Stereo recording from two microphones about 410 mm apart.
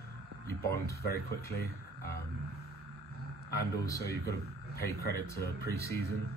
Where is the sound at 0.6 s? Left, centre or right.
Centre.